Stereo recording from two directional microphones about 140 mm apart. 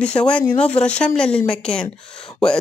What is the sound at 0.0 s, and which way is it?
Speech, 10° left (ahead or behind).